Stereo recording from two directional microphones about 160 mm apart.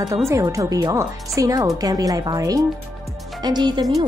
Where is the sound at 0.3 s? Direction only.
20° right (ahead or behind).